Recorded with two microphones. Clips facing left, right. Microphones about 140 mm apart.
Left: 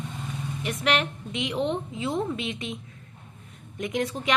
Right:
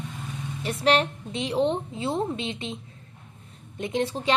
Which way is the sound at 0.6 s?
35° right (ahead or behind).